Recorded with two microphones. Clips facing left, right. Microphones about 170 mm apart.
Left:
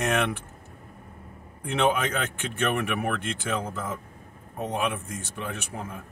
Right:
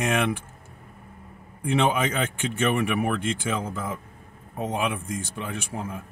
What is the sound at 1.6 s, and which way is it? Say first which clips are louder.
A man's voice: right 2 dB; 10° right (ahead or behind).